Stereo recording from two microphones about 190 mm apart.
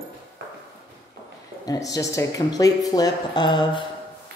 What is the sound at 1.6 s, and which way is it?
Speech, 20° left (ahead or behind).